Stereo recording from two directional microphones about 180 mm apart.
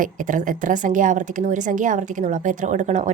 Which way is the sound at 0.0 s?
45° right (ahead or behind).